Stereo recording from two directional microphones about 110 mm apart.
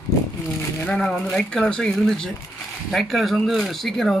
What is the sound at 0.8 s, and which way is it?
Speech, 10° left (ahead or behind).